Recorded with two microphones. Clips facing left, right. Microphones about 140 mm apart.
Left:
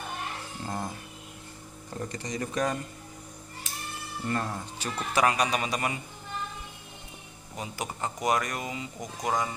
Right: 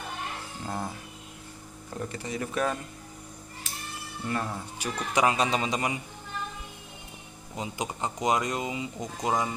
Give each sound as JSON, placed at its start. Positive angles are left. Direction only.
{"t": 0.7, "sound": "a sound", "side_deg": -5}
{"t": 2.0, "sound": "speech", "side_deg": -5}
{"t": 4.3, "sound": "speech", "side_deg": -10}
{"t": 7.5, "sound": "speech", "side_deg": -20}